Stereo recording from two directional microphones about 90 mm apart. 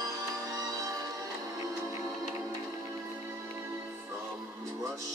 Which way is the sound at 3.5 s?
25° right (ahead or behind).